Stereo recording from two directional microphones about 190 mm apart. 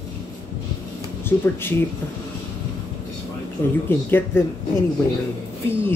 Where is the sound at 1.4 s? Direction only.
10° left (ahead or behind).